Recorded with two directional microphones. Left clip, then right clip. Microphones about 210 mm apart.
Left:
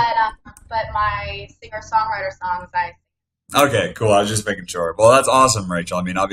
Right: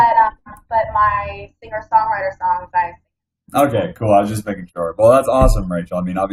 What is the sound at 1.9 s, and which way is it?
Music, 50° left (ahead or behind).